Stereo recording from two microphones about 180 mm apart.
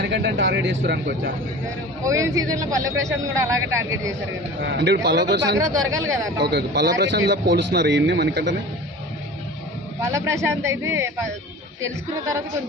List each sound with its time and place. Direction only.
0.0 s a man's voice: 70° right (ahead or behind)
2.0 s a man's voice: 15° right (ahead or behind)
4.6 s a man's voice: 70° right (ahead or behind)
5.5 s a man's voice: 20° right (ahead or behind)
6.4 s a man's voice: 65° right (ahead or behind)
10.0 s a man's voice: 15° right (ahead or behind)